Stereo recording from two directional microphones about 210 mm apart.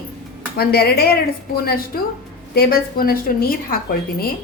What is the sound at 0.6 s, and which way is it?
A woman's voice, 50° left (ahead or behind).